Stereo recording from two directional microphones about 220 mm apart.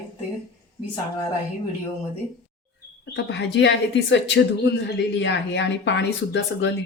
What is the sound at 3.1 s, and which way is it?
Speech, 55° left (ahead or behind).